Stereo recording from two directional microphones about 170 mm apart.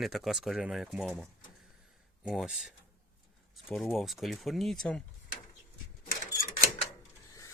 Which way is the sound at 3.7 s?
Centre (ahead or behind).